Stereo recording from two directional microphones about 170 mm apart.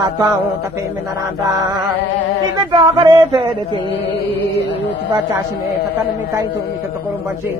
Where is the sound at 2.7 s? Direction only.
25° right (ahead or behind).